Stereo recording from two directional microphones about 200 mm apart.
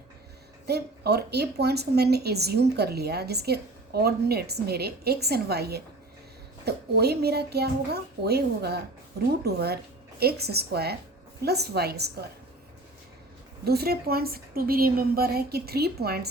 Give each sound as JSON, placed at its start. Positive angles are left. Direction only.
{"t": 0.7, "sound": "a woman's voice", "side_deg": -55}
{"t": 13.7, "sound": "a woman's voice", "side_deg": -50}